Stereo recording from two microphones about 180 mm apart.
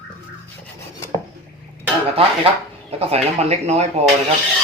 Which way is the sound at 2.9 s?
35° right (ahead or behind).